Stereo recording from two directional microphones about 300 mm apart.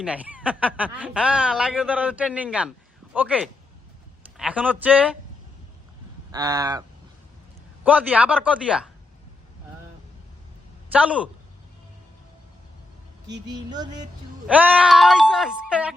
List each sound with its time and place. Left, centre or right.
0.0 s speech: centre
6.3 s a sound: centre
7.9 s speech: centre
10.9 s speech: centre
13.5 s a sound: centre
14.4 s speech: centre